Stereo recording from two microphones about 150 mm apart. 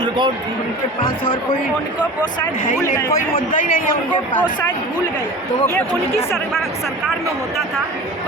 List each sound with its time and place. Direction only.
3.1 s a man's voice: 65° left (ahead or behind)
6.3 s speech: centre (ahead or behind)